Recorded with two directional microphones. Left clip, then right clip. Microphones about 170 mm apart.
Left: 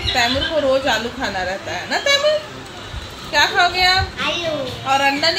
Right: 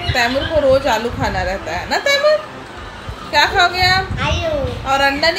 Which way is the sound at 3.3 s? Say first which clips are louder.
Right 2 dB; centre (ahead or behind).